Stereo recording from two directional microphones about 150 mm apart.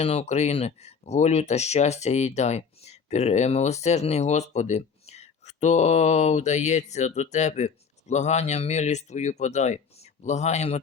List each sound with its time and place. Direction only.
0.0 s speech: 45° left (ahead or behind)